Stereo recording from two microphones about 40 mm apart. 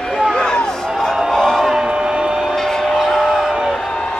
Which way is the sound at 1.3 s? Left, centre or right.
Centre.